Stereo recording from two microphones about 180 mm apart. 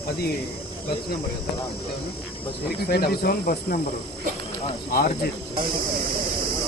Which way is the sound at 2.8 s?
60° left (ahead or behind).